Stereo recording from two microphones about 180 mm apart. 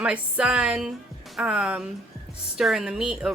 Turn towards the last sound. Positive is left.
turn(degrees=-5)  # may be behind; listen again after turning